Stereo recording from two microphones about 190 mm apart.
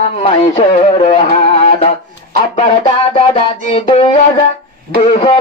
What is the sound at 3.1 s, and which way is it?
A man's voice, 30° left (ahead or behind).